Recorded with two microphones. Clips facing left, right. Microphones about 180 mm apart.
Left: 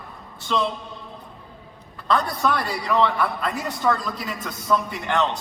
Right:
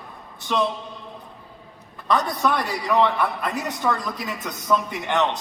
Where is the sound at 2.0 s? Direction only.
20° right (ahead or behind).